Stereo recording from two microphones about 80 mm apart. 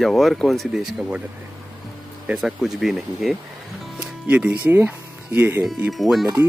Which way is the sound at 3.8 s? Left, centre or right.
Centre.